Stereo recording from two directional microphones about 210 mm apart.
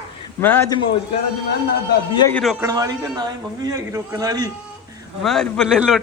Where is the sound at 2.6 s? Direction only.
20° right (ahead or behind).